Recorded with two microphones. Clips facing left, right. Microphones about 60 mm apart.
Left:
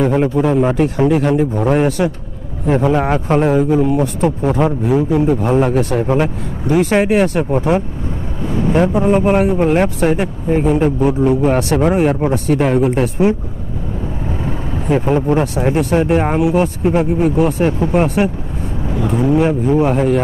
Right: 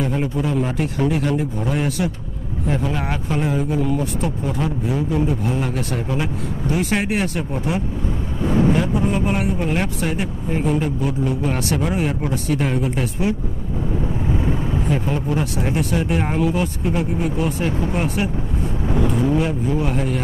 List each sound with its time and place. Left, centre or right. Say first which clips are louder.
0.0 s speech: left 8 dB; left
0.6 s speech: left 7 dB; left
1.5 s speech: left 8 dB; left
3.3 s speech: left 8 dB; left
3.7 s a man's voice: left 7 dB; left
4.0 s speech: left 8 dB; left
10.5 s a man's voice: left 7 dB; left
11.2 s speech: left 8 dB; left
14.9 s speech: left 11 dB; left
19.3 s speech: left 7 dB; left